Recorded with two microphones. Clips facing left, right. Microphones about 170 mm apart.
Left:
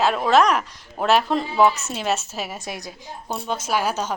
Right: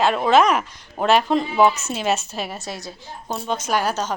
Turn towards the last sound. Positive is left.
turn(degrees=10)  # may be behind; listen again after turning